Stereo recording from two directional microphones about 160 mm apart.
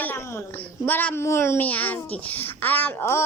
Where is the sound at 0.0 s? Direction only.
15° left (ahead or behind).